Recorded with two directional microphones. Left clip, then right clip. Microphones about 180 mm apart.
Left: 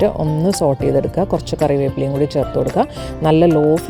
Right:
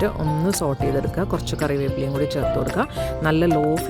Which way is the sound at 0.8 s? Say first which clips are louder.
Left 7 dB; 20° left (ahead or behind).